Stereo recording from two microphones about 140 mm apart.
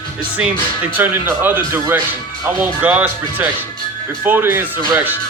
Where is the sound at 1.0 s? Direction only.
15° right (ahead or behind).